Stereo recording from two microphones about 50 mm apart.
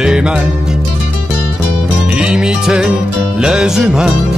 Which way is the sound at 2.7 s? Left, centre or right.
Centre.